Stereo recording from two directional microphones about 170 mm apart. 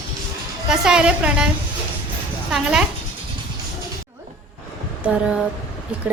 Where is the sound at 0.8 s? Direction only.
5° right (ahead or behind).